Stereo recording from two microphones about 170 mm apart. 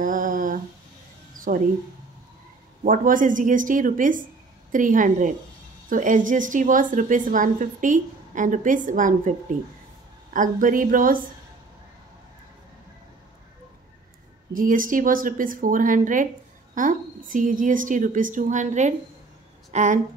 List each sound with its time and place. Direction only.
0.0 s humming: 50° right (ahead or behind)
1.5 s a woman's voice: 50° right (ahead or behind)
2.8 s a woman's voice: 50° right (ahead or behind)
14.5 s a woman's voice: 55° right (ahead or behind)